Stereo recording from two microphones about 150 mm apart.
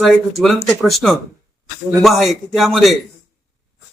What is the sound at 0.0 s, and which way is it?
Speech, centre (ahead or behind).